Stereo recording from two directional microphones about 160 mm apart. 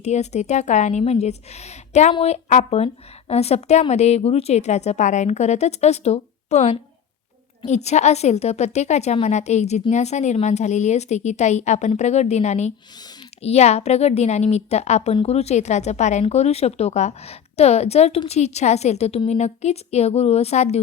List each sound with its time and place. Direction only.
0.0 s a woman's voice: 45° left (ahead or behind)